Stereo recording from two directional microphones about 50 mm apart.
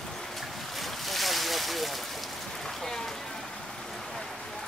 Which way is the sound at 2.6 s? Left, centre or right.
Centre.